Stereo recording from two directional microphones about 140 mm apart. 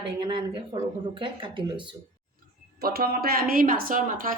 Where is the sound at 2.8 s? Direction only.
90° right.